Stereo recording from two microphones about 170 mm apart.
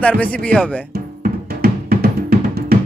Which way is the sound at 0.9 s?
60° right (ahead or behind).